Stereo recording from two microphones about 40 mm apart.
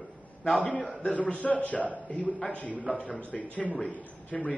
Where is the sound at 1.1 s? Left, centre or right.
Left.